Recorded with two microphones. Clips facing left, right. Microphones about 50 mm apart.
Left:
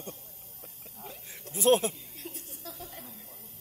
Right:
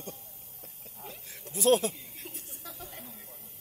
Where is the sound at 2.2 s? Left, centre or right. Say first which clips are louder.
Left 4 dB; right.